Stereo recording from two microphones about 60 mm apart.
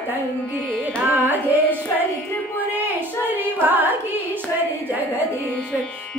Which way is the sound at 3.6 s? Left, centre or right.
Right.